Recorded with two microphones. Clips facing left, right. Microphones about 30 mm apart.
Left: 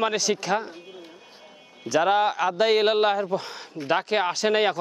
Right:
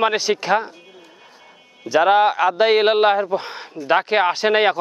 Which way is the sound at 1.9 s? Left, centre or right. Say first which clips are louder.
Right 6 dB; right.